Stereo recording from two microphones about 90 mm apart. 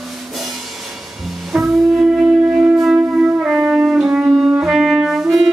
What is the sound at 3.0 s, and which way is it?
Music, 20° right (ahead or behind).